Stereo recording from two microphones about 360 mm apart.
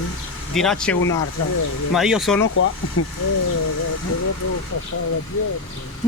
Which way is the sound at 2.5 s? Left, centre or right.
Left.